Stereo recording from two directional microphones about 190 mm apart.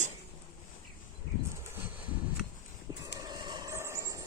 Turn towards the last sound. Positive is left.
turn(degrees=-15)  # may be behind; listen again after turning